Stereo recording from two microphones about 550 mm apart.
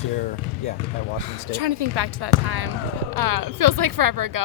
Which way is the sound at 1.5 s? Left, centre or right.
Right.